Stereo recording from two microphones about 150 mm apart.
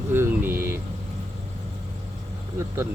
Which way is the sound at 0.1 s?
15° right (ahead or behind).